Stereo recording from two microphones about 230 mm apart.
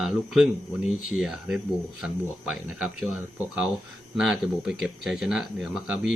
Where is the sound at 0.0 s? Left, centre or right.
Centre.